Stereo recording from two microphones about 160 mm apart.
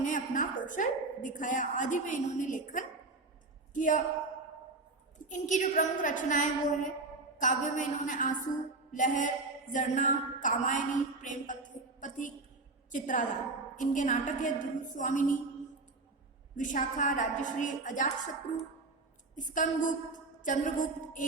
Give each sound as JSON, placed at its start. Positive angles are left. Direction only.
{"t": 0.0, "sound": "a woman's voice", "side_deg": 55}
{"t": 5.3, "sound": "a woman's voice", "side_deg": 50}
{"t": 16.6, "sound": "a woman's voice", "side_deg": 55}